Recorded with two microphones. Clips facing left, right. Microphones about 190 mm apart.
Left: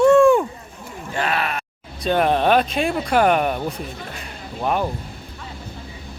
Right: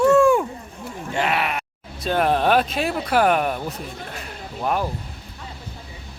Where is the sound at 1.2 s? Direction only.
20° right (ahead or behind).